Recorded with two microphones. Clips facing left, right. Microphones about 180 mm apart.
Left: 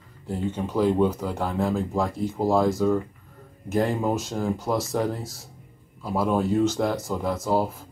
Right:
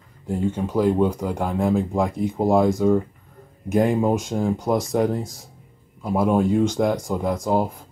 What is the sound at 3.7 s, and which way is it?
Speech, 15° right (ahead or behind).